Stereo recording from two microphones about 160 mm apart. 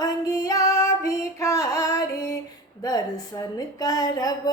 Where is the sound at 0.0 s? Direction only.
20° left (ahead or behind).